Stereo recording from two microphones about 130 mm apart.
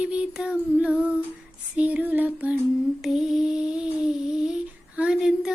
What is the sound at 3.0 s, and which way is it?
Music, 5° right (ahead or behind).